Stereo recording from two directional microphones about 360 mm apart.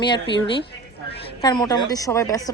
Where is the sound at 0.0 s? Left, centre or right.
Centre.